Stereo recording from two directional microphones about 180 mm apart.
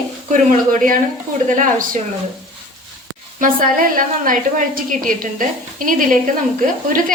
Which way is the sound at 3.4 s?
50° right (ahead or behind).